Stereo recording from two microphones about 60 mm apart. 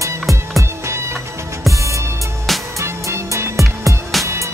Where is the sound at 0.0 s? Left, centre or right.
Right.